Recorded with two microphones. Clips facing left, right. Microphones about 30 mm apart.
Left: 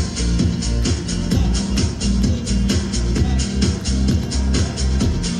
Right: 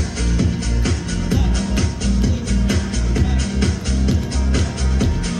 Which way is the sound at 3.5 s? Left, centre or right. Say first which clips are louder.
Even; left.